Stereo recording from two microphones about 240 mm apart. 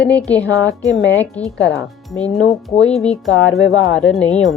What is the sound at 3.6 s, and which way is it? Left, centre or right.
Speech, left.